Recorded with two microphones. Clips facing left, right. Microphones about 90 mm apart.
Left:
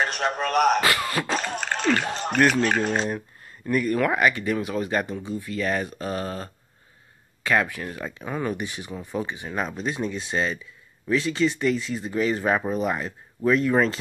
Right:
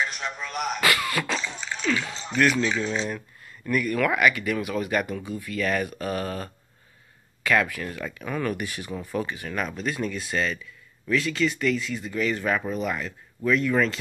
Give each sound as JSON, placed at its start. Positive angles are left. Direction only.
{"t": 0.0, "sound": "speech", "side_deg": 60}
{"t": 0.7, "sound": "speech", "side_deg": 30}
{"t": 1.3, "sound": "speech", "side_deg": 65}
{"t": 3.1, "sound": "a sound", "side_deg": 35}
{"t": 3.6, "sound": "speech", "side_deg": 35}